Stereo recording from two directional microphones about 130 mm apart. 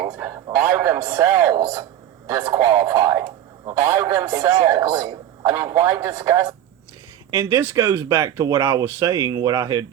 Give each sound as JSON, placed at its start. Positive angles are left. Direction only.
{"t": 0.9, "sound": "a man's voice", "side_deg": -25}